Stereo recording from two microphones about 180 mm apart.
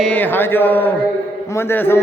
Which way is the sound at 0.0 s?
10° left (ahead or behind).